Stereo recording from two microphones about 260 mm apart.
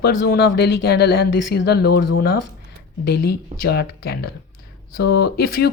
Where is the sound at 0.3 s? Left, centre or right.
Left.